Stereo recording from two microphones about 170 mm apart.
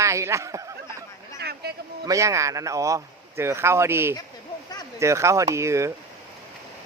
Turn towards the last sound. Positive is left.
turn(degrees=-15)  # may be behind; listen again after turning